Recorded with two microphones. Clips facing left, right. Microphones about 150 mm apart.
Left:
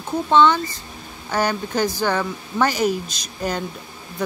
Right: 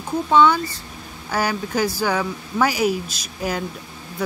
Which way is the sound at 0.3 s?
10° right (ahead or behind).